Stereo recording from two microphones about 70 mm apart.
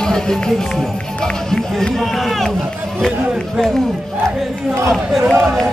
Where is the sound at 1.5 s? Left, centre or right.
Centre.